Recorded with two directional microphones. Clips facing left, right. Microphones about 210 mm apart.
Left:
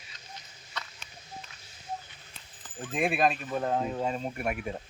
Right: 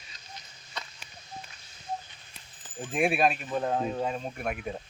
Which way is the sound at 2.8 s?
10° right (ahead or behind).